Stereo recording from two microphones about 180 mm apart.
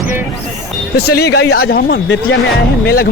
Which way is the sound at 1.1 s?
65° left (ahead or behind).